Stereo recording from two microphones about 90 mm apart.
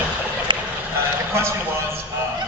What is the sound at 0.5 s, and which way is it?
Vehicle, 65° right (ahead or behind).